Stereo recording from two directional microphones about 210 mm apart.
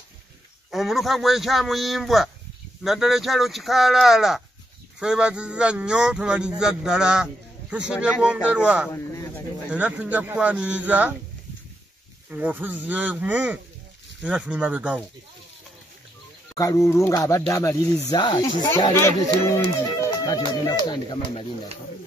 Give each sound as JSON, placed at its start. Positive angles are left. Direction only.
{"t": 0.7, "sound": "speech", "side_deg": 0}
{"t": 8.9, "sound": "a sound", "side_deg": 15}
{"t": 9.7, "sound": "a man's voice", "side_deg": -5}
{"t": 12.3, "sound": "a man's voice", "side_deg": -10}
{"t": 16.5, "sound": "speech", "side_deg": 15}
{"t": 20.8, "sound": "speech", "side_deg": 20}